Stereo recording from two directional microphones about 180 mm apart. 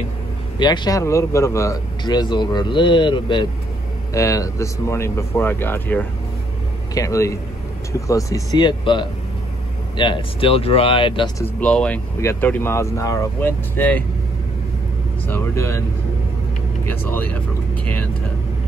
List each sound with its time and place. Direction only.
0.6 s a man's voice: 20° left (ahead or behind)
11.4 s a man's voice: 5° left (ahead or behind)
15.2 s speech: 15° left (ahead or behind)
16.9 s a man's voice: 10° left (ahead or behind)